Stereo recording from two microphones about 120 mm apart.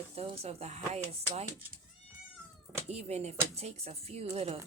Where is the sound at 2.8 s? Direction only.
65° right (ahead or behind).